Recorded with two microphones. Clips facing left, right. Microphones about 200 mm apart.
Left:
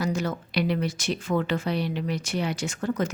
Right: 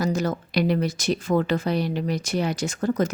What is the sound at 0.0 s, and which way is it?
Speech, 40° right (ahead or behind).